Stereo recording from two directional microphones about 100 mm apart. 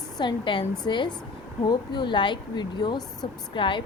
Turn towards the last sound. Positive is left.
turn(degrees=55)  # may be behind; listen again after turning